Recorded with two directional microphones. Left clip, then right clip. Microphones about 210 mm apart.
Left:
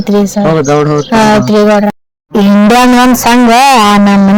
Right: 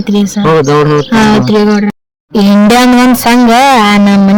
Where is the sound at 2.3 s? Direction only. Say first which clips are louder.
Even; 5° right (ahead or behind).